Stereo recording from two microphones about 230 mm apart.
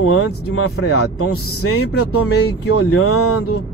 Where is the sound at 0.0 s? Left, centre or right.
Left.